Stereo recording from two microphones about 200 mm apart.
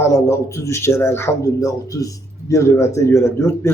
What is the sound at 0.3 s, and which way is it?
Speech, 15° left (ahead or behind).